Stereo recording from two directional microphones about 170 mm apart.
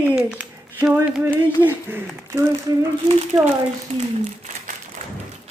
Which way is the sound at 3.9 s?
45° right (ahead or behind).